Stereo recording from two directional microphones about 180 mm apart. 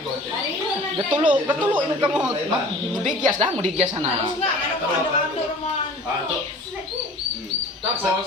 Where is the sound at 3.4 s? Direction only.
35° right (ahead or behind).